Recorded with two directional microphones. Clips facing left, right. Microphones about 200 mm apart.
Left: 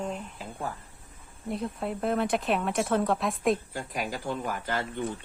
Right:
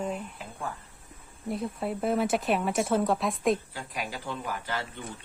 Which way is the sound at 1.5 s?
Centre (ahead or behind).